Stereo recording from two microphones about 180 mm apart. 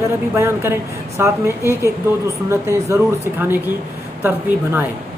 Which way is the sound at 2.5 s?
15° right (ahead or behind).